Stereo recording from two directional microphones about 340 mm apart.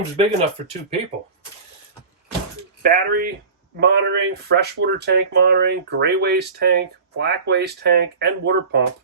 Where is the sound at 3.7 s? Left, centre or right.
Right.